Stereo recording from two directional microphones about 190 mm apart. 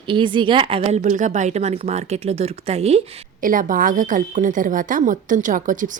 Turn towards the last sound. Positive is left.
turn(degrees=-45)  # may be behind; listen again after turning